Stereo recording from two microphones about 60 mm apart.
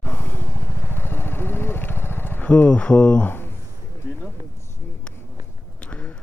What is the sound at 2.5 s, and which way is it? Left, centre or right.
Speech, left.